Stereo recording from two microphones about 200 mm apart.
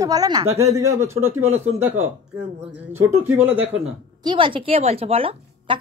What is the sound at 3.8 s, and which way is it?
Speech, 25° right (ahead or behind).